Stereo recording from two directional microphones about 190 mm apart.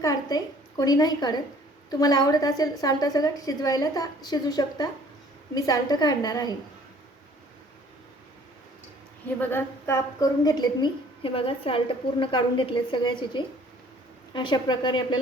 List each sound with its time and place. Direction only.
0.0 s a woman's voice: 20° left (ahead or behind)
9.4 s a woman's voice: 10° left (ahead or behind)